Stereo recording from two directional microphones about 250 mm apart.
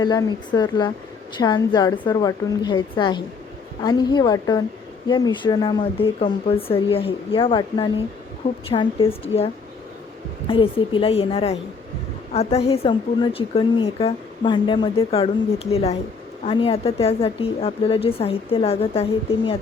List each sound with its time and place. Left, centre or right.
0.0 s a woman's voice: centre